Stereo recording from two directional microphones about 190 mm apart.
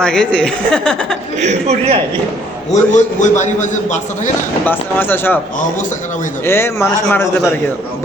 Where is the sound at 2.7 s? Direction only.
40° left (ahead or behind).